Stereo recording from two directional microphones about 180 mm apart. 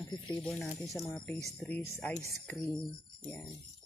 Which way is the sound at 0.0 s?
25° left (ahead or behind).